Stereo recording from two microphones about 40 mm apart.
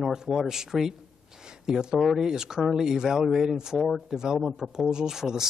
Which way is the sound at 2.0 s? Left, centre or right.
Centre.